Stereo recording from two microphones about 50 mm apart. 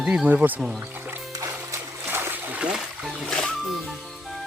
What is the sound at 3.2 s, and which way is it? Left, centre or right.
Speech, centre.